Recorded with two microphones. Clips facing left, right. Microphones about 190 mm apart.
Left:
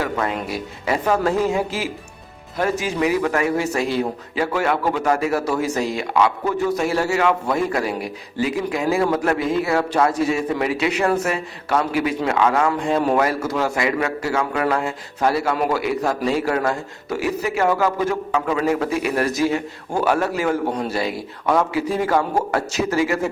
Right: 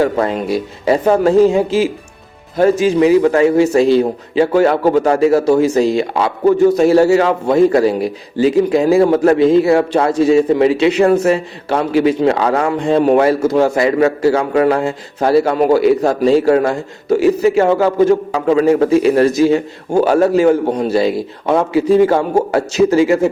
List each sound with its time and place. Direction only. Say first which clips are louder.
0.0 s a man's voice: right 8 dB; 30° right (ahead or behind)